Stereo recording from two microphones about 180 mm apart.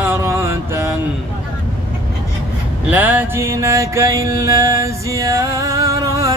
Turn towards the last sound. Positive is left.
turn(degrees=-20)  # may be behind; listen again after turning